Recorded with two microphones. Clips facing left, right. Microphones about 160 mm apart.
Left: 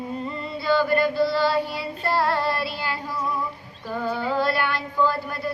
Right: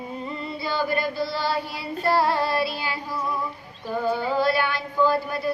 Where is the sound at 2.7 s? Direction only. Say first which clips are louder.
Left 1 dB; 15° right (ahead or behind).